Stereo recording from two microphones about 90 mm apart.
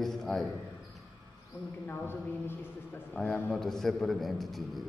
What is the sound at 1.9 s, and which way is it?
A woman's voice, 25° left (ahead or behind).